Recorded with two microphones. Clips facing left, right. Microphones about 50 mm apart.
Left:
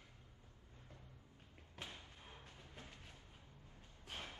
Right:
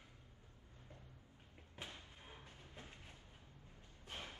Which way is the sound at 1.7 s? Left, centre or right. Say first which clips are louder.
Even; centre.